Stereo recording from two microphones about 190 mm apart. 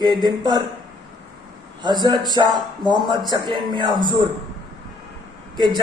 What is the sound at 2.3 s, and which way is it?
A man's voice, 20° right (ahead or behind).